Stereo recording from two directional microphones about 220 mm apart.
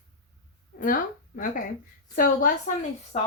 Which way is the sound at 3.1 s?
30° left (ahead or behind).